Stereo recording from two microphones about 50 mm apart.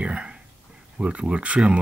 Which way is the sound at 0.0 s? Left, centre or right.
Right.